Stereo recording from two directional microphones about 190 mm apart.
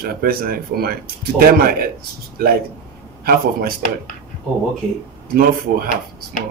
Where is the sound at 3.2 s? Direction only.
55° right (ahead or behind).